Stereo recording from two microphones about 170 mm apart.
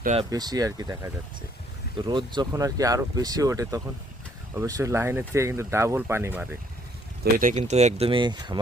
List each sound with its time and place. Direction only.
0.3 s speech: 20° right (ahead or behind)
7.3 s speech: 55° right (ahead or behind)
7.6 s speech: 40° right (ahead or behind); by 8.5 s 25° right (ahead or behind)